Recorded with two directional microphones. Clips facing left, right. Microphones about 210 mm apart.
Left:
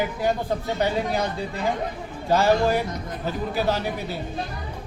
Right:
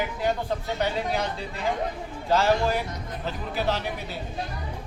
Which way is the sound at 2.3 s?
15° left (ahead or behind).